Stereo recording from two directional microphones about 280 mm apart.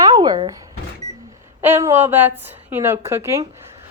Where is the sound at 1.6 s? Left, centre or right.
Centre.